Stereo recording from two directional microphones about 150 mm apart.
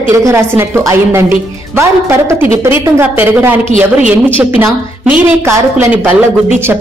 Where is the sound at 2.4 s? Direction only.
15° right (ahead or behind).